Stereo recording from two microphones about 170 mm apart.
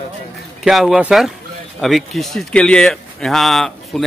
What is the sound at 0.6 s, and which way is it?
Speech, centre (ahead or behind).